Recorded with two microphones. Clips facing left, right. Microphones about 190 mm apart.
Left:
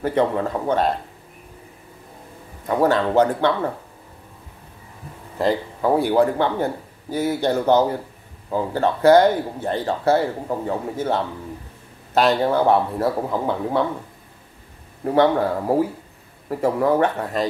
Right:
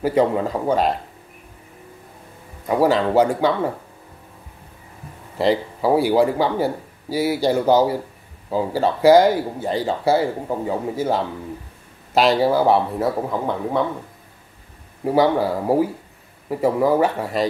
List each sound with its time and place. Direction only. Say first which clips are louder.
0.0 s speech: right 2 dB; 10° right (ahead or behind)
2.7 s speech: right 1 dB; 10° right (ahead or behind)
5.4 s speech: right 2 dB; 10° right (ahead or behind)
15.0 s speech: even; 5° right (ahead or behind)